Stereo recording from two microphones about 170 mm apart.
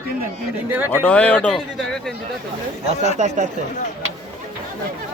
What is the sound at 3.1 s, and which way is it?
Speech, 45° right (ahead or behind).